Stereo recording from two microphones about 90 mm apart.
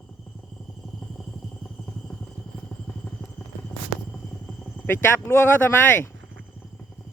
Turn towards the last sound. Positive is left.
turn(degrees=25)  # may be behind; listen again after turning